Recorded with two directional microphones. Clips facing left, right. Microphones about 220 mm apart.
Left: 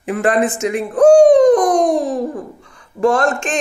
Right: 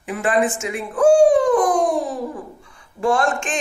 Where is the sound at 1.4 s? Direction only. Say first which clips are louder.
Left 6 dB; 40° left (ahead or behind).